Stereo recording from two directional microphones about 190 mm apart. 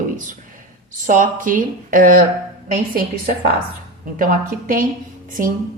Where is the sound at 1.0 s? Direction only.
45° right (ahead or behind).